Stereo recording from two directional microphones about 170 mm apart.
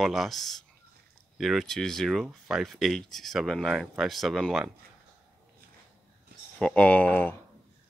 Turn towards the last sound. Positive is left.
turn(degrees=10)  # may be behind; listen again after turning